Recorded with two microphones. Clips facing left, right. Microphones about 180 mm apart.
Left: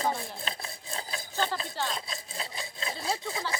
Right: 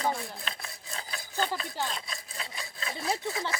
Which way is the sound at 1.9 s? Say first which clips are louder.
Left 2 dB; 30° left (ahead or behind).